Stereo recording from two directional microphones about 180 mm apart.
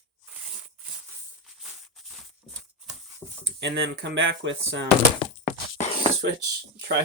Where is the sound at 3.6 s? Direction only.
75° right (ahead or behind).